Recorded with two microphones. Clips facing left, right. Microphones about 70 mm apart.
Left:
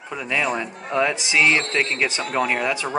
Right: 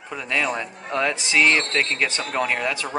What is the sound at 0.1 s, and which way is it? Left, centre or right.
Speech, centre.